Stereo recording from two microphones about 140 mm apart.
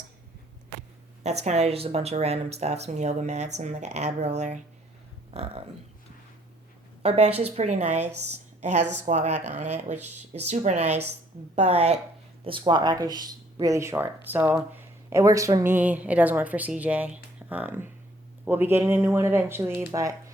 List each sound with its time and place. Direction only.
1.2 s speech: 50° right (ahead or behind)
5.3 s speech: 45° right (ahead or behind)
7.0 s speech: 50° right (ahead or behind)
12.5 s speech: 35° right (ahead or behind)